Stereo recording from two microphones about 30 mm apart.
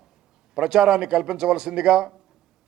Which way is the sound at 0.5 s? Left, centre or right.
Right.